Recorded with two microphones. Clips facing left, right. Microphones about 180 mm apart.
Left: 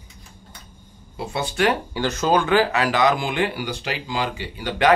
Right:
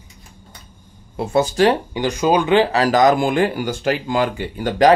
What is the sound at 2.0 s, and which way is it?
Speech, 15° right (ahead or behind).